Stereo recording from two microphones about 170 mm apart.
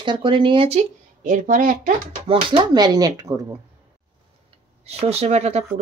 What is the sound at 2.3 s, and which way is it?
A woman's voice, 30° right (ahead or behind).